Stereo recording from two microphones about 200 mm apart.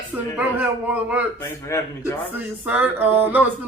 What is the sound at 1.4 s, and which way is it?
Speech, 15° left (ahead or behind).